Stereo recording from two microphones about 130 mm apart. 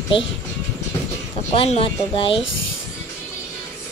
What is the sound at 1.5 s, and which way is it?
Speech, 45° left (ahead or behind).